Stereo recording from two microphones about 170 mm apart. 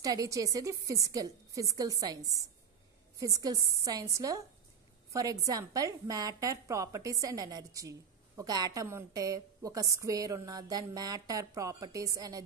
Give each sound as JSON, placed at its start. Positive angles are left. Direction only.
{"t": 0.0, "sound": "a woman's voice", "side_deg": -20}